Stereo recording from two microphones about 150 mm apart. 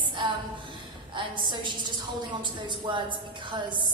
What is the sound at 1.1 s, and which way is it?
A woman's voice, 30° right (ahead or behind).